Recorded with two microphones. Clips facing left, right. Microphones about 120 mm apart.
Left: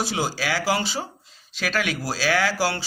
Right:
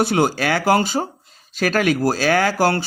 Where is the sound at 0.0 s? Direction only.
55° right (ahead or behind).